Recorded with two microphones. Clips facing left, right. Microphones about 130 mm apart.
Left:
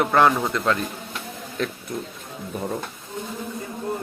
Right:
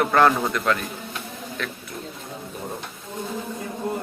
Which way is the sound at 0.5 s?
25° left (ahead or behind).